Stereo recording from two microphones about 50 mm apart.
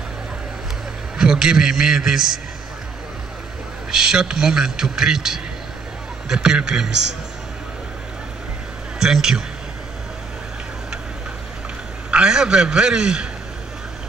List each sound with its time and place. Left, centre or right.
1.1 s a man's voice: centre
3.9 s a man's voice: centre
9.0 s a man's voice: centre
12.1 s a man's voice: centre